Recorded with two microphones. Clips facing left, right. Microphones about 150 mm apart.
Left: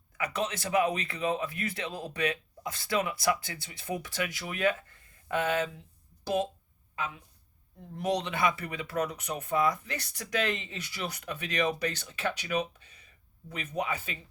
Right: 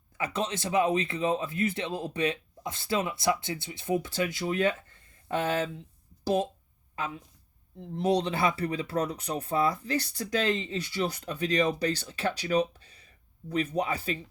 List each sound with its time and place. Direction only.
0.2 s speech: 30° right (ahead or behind)
7.8 s speech: 25° right (ahead or behind)